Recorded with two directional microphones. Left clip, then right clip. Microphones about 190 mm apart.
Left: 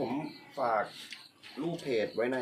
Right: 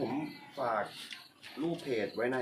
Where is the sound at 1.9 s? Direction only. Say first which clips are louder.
Left 4 dB; 60° left (ahead or behind).